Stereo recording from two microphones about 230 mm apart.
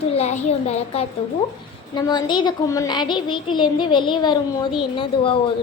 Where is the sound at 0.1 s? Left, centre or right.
Left.